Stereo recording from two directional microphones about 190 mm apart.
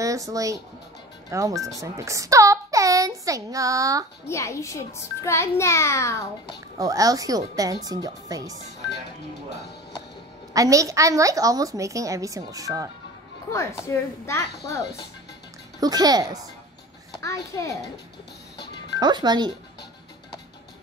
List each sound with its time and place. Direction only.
0.0 s a child's voice: 15° right (ahead or behind)
4.3 s a child's voice: 15° left (ahead or behind)
6.8 s speech: 20° right (ahead or behind)
10.5 s a woman's voice: 15° right (ahead or behind)
13.5 s a child's voice: 15° left (ahead or behind)
15.8 s speech: 20° right (ahead or behind)
17.2 s a child's voice: 15° left (ahead or behind)
18.9 s speech: 20° right (ahead or behind)